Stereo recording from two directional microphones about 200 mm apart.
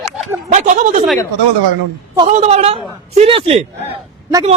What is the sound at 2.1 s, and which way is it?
A woman's voice, 30° right (ahead or behind).